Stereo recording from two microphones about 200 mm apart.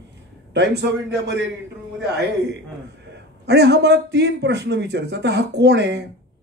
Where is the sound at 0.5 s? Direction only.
55° right (ahead or behind).